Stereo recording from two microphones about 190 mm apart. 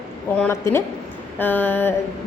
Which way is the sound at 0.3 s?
10° left (ahead or behind).